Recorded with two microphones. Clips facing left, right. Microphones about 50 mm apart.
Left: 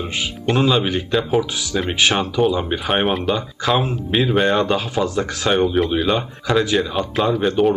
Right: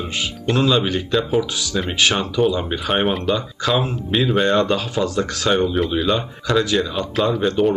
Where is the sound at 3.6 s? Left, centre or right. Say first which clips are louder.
Left 1 dB; centre.